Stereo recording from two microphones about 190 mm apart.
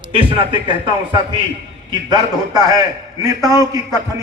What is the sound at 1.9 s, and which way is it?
Speech, 20° right (ahead or behind).